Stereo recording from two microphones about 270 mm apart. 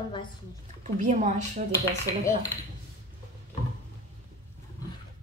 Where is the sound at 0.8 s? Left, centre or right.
Right.